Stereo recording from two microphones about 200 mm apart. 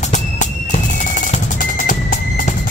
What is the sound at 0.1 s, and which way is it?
Music, 40° left (ahead or behind).